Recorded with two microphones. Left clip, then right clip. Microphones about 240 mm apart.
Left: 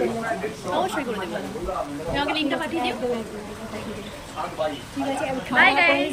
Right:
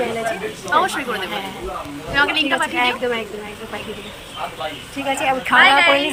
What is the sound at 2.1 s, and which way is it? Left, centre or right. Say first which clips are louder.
Speech: right 8 dB; centre.